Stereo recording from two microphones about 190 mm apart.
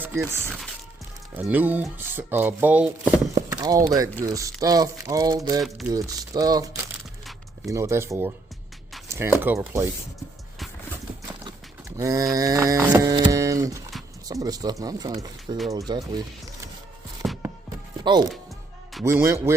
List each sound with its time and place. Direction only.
0.0 s speech: 15° right (ahead or behind)
1.3 s cattle: 10° right (ahead or behind)
3.5 s speech: 20° right (ahead or behind)
4.2 s cattle: 15° right (ahead or behind)
5.5 s speech: centre (ahead or behind)
5.9 s speech: 20° right (ahead or behind)
7.6 s cattle: 15° right (ahead or behind)
11.9 s cattle: 15° right (ahead or behind)
14.3 s speech: 20° right (ahead or behind)
17.2 s music: centre (ahead or behind)
18.0 s speech: 20° right (ahead or behind)
19.0 s cattle: 15° right (ahead or behind)